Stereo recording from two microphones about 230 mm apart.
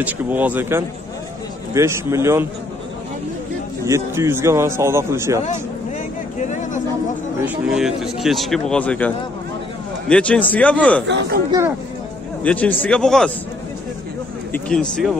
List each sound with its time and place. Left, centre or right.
0.0 s a man's voice: centre
3.8 s a man's voice: centre
6.5 s a sound: left
7.4 s speech: centre
11.1 s speech: right
12.4 s speech: centre
14.5 s speech: centre